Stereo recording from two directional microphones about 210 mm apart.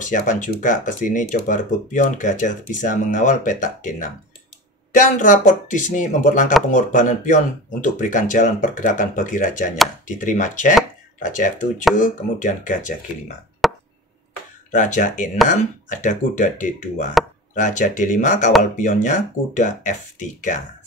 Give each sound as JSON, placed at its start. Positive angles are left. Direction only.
{"t": 0.0, "sound": "speech", "side_deg": 35}
{"t": 12.0, "sound": "speech", "side_deg": 35}
{"t": 13.6, "sound": "chop", "side_deg": 0}
{"t": 14.7, "sound": "speech", "side_deg": 35}